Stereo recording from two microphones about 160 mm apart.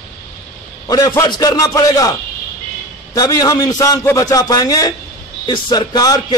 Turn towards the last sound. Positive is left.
turn(degrees=25)  # may be behind; listen again after turning